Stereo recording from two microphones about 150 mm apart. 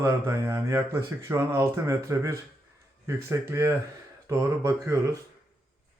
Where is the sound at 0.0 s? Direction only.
20° right (ahead or behind).